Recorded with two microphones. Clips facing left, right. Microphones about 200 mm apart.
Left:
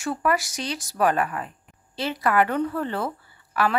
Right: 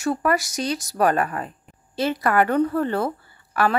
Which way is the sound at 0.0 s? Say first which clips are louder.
Right 3 dB; 40° right (ahead or behind).